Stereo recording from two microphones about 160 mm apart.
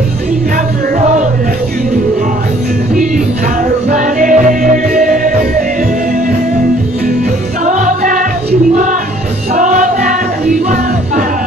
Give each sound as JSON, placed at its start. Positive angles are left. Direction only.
{"t": 3.9, "sound": "music", "side_deg": -55}
{"t": 7.6, "sound": "music", "side_deg": -55}
{"t": 9.6, "sound": "music", "side_deg": -55}